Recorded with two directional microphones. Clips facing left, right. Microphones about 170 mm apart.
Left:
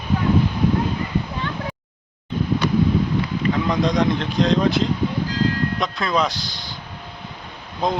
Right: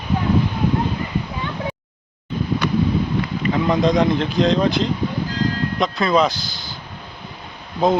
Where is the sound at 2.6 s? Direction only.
35° left (ahead or behind).